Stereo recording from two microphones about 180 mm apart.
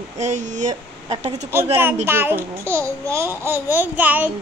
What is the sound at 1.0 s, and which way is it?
Speech, 35° right (ahead or behind).